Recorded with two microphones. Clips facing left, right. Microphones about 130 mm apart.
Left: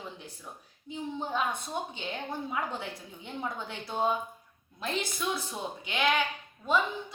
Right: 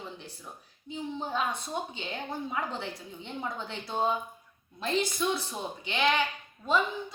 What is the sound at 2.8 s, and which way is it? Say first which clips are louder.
A woman's voice: right 2 dB; 5° left (ahead or behind).